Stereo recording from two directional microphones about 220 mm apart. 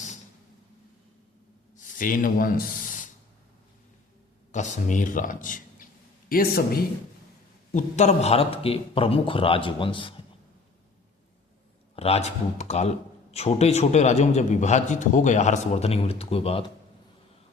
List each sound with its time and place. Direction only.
1.7 s speech: 35° left (ahead or behind)
4.5 s a man's voice: 35° left (ahead or behind)
11.9 s a man's voice: 30° left (ahead or behind)